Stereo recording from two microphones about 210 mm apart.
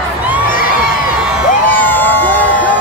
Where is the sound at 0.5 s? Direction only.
40° left (ahead or behind).